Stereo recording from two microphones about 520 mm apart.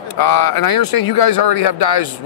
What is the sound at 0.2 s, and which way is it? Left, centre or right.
Speech, left.